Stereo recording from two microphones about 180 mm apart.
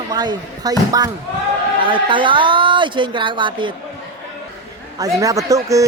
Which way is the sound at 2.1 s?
25° right (ahead or behind).